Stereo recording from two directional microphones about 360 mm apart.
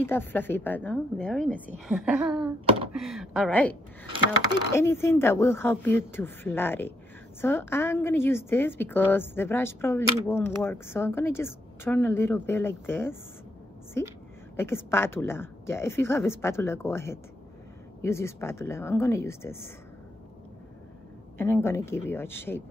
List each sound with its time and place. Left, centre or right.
0.0 s a woman's voice: centre
2.3 s wail: centre
2.9 s a woman's voice: centre
4.7 s a woman's voice: centre
14.6 s a woman's voice: centre
21.4 s a woman's voice: centre